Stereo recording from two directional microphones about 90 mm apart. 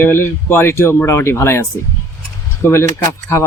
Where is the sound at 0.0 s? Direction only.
25° left (ahead or behind).